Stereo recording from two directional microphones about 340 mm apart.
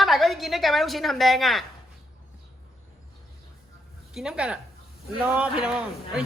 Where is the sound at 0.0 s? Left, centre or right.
Centre.